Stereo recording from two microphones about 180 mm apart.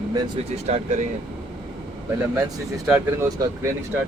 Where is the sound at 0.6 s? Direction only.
40° right (ahead or behind).